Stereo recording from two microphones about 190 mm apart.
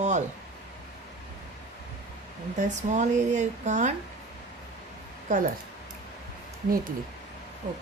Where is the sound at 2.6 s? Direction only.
40° right (ahead or behind).